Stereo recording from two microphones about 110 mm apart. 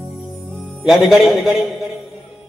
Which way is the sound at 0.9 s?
5° right (ahead or behind).